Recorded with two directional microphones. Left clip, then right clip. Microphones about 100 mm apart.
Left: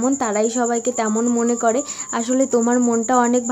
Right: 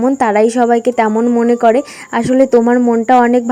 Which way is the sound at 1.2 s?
40° right (ahead or behind).